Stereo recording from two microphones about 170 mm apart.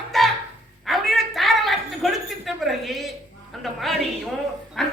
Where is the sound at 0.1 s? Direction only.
Centre (ahead or behind).